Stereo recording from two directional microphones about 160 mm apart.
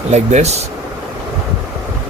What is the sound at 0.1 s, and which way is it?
Speech, 45° right (ahead or behind).